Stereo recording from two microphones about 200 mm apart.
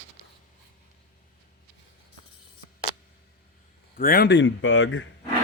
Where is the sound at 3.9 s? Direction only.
50° left (ahead or behind); by 5.1 s 70° left (ahead or behind).